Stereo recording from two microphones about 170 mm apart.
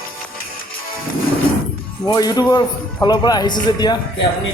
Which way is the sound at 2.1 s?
20° left (ahead or behind).